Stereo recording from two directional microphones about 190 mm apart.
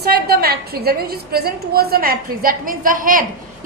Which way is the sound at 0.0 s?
55° right (ahead or behind).